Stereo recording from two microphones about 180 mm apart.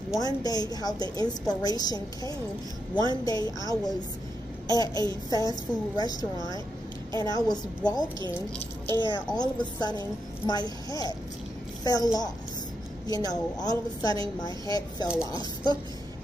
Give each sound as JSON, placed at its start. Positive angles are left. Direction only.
{"t": 0.2, "sound": "a woman's voice", "side_deg": 20}
{"t": 8.8, "sound": "speech", "side_deg": -25}
{"t": 9.3, "sound": "a woman's voice", "side_deg": 20}